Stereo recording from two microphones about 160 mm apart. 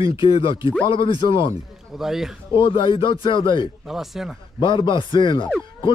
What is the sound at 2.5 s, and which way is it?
Speech, 30° left (ahead or behind).